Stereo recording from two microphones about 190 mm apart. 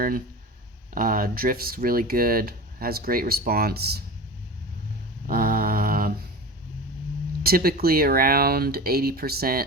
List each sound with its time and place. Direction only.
0.9 s speech: 45° right (ahead or behind)
5.2 s mantra: 50° right (ahead or behind)
7.4 s speech: 50° right (ahead or behind)